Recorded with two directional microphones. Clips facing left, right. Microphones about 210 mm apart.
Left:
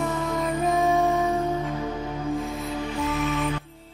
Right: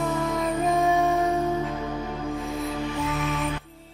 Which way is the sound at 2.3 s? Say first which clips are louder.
Even; centre (ahead or behind).